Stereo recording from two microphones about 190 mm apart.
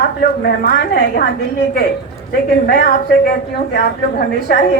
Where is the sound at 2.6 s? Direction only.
45° left (ahead or behind).